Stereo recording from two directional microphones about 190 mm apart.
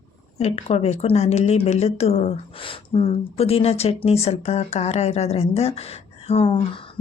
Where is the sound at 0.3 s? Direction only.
35° left (ahead or behind).